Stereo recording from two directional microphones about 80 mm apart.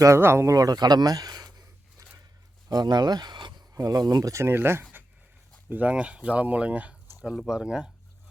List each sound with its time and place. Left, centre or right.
0.2 s speech: right
0.5 s speech: right
2.6 s speech: right
3.8 s speech: right; by 7.9 s centre